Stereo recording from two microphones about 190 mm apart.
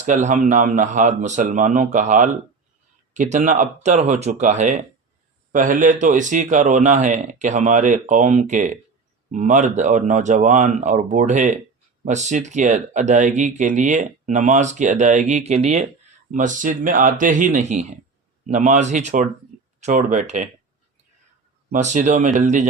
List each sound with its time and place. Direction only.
0.0 s speech: 40° right (ahead or behind)
21.7 s speech: 40° right (ahead or behind)